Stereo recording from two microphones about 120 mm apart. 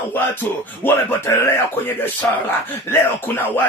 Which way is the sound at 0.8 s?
15° left (ahead or behind).